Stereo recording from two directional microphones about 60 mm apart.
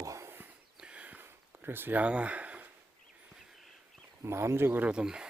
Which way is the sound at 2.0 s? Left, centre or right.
Right.